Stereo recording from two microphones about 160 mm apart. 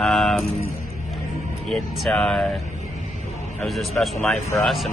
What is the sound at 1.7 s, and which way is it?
Music, centre (ahead or behind).